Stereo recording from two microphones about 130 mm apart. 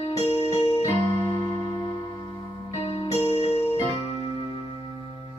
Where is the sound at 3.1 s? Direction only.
50° left (ahead or behind).